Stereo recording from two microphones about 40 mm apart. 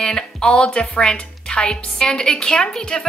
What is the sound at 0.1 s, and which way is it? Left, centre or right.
A woman's voice, left.